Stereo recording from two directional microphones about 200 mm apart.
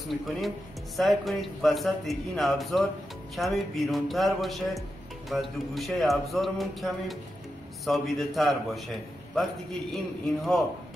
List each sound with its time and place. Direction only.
0.9 s a man's voice: centre (ahead or behind)